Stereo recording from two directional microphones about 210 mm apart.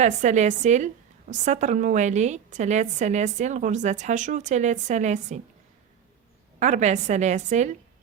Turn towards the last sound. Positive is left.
turn(degrees=-35)  # may be behind; listen again after turning